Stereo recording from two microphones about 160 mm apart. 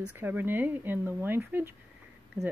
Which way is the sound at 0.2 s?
10° right (ahead or behind).